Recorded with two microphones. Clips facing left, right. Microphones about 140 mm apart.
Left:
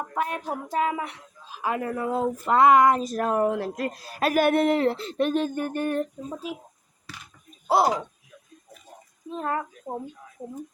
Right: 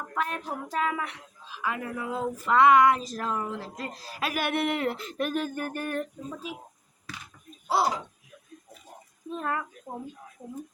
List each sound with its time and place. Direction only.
0.1 s child singing: 25° left (ahead or behind)
0.4 s speech: 30° left (ahead or behind)
1.5 s speech: 40° left (ahead or behind)
7.8 s speech: 45° left (ahead or behind)
9.3 s speech: 30° left (ahead or behind)